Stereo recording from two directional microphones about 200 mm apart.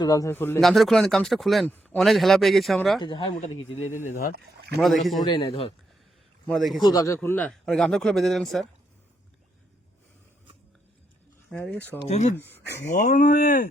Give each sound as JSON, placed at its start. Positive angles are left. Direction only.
{"t": 0.0, "sound": "speech", "side_deg": 15}
{"t": 0.6, "sound": "speech", "side_deg": 0}
{"t": 3.0, "sound": "speech", "side_deg": 25}
{"t": 4.0, "sound": "speech", "side_deg": 40}
{"t": 4.8, "sound": "speech", "side_deg": 0}
{"t": 5.2, "sound": "speech", "side_deg": 25}
{"t": 6.5, "sound": "speech", "side_deg": 0}
{"t": 6.8, "sound": "speech", "side_deg": 15}
{"t": 11.5, "sound": "speech", "side_deg": 5}
{"t": 12.0, "sound": "speech", "side_deg": 35}
{"t": 12.4, "sound": "speech", "side_deg": 10}
{"t": 12.6, "sound": "speech", "side_deg": 55}
{"t": 12.9, "sound": "speech", "side_deg": 40}